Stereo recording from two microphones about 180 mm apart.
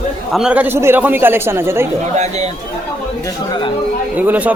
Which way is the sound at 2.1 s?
40° right (ahead or behind).